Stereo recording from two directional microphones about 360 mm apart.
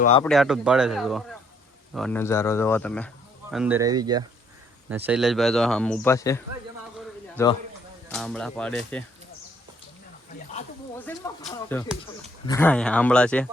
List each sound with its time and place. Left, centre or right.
0.0 s speech: centre
0.3 s speech: centre
8.0 s speech: centre
10.9 s speech: centre